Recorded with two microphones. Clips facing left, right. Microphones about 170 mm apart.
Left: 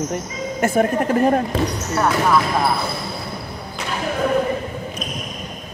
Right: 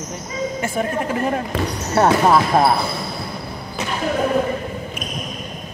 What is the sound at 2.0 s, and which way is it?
Speech, 30° right (ahead or behind).